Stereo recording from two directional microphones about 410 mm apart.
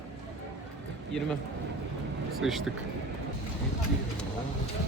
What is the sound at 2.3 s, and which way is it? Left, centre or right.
Speech, centre.